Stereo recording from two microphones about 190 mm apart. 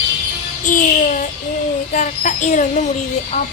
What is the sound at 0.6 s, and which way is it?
Music, 45° left (ahead or behind).